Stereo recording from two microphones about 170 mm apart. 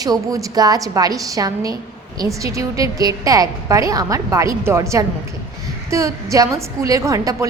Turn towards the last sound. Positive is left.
turn(degrees=-20)  # may be behind; listen again after turning